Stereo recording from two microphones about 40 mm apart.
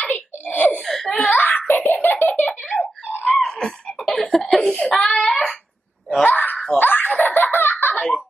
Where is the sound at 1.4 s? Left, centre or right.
Left.